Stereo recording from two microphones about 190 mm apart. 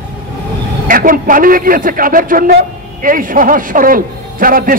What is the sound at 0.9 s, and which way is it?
A man's voice, 45° right (ahead or behind).